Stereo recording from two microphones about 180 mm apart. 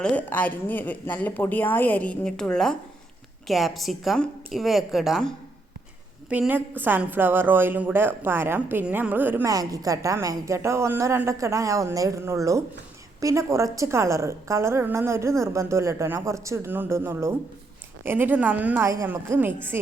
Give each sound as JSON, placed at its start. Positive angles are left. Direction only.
{"t": 0.0, "sound": "a woman's voice", "side_deg": 5}